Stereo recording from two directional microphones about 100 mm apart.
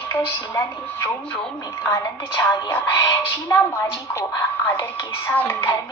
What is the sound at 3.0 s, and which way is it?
Music, 40° left (ahead or behind).